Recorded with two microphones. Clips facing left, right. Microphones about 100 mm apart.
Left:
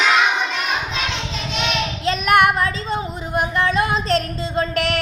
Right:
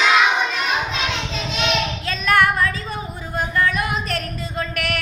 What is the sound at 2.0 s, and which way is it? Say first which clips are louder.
Singing: left 3 dB; 20° left (ahead or behind).